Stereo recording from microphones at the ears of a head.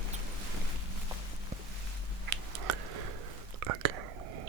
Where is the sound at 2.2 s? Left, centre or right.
Right.